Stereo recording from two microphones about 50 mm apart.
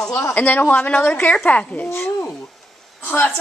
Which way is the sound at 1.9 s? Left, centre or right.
Left.